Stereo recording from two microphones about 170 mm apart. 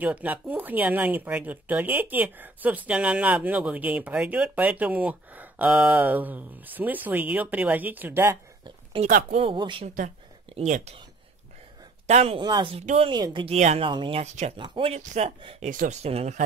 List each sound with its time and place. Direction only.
0.0 s speech: 10° right (ahead or behind)
9.0 s speech: 50° right (ahead or behind)
9.4 s speech: 30° right (ahead or behind)
10.5 s speech: 40° right (ahead or behind)
12.1 s speech: 35° right (ahead or behind)
12.8 s speech: 40° right (ahead or behind)
13.1 s a woman's voice: 25° right (ahead or behind)
14.2 s speech: 40° right (ahead or behind)
14.6 s speech: 30° right (ahead or behind)
15.7 s speech: 45° right (ahead or behind)